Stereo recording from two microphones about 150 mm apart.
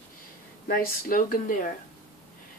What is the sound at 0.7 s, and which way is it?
Speech, 70° left (ahead or behind).